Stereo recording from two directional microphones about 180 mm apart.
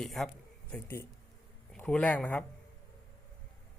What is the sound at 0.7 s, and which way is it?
Speech, 10° left (ahead or behind).